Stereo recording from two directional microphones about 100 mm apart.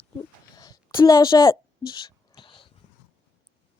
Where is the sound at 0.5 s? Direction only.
40° left (ahead or behind); by 2.6 s 55° left (ahead or behind).